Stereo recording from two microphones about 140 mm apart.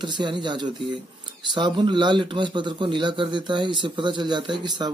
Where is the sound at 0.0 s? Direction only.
35° right (ahead or behind).